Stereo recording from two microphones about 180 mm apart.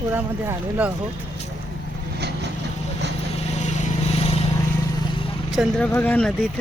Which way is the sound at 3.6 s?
40° left (ahead or behind).